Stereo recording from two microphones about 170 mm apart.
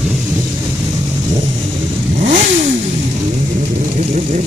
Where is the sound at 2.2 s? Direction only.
45° right (ahead or behind).